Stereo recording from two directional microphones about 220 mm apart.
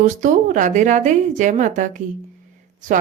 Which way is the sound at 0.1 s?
35° right (ahead or behind).